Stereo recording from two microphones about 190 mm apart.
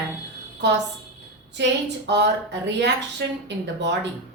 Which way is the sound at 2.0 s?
65° right (ahead or behind).